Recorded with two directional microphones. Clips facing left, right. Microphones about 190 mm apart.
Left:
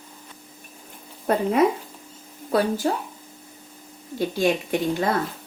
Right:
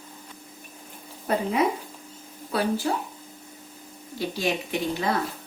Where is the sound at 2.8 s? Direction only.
40° left (ahead or behind).